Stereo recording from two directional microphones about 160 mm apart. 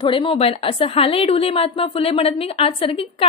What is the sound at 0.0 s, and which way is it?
A woman's voice, 30° left (ahead or behind).